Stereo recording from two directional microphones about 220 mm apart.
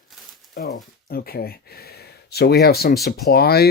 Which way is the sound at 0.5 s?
45° left (ahead or behind).